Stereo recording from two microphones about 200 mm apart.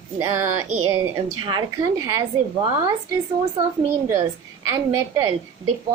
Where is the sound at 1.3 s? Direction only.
20° right (ahead or behind).